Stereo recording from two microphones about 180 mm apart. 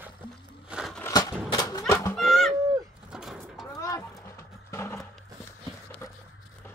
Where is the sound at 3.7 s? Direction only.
20° left (ahead or behind).